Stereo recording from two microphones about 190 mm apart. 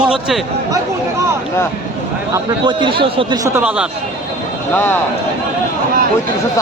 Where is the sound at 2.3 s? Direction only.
25° right (ahead or behind); by 3.8 s 5° right (ahead or behind).